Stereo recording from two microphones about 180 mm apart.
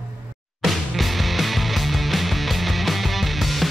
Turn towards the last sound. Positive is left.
turn(degrees=0)  # may be behind; listen again after turning